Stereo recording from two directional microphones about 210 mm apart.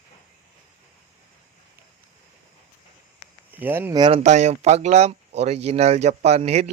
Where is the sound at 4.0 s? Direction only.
25° right (ahead or behind).